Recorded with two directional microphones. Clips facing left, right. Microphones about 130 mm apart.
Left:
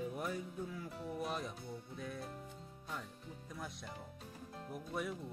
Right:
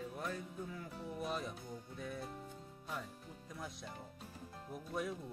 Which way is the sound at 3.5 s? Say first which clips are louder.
Even; centre (ahead or behind).